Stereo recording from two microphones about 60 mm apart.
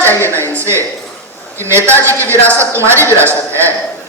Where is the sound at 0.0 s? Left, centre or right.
Left.